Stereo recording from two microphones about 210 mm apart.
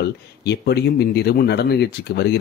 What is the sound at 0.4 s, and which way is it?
Speech, 50° left (ahead or behind).